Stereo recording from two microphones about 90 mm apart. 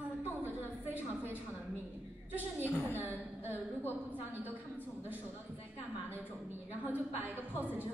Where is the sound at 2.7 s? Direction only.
25° left (ahead or behind).